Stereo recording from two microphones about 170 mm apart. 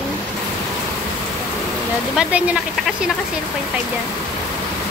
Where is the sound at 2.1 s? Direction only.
5° right (ahead or behind).